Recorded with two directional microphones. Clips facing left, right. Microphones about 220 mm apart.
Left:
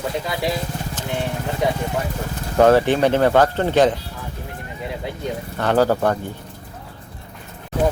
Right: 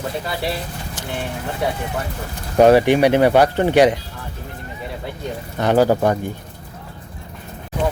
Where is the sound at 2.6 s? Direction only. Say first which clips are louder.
Right 2 dB; 15° right (ahead or behind).